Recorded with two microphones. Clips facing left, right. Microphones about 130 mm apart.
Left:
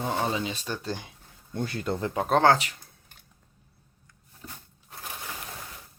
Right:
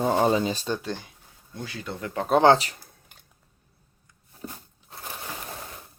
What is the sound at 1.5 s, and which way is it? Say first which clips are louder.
Speech: left 6 dB; 50° left (ahead or behind).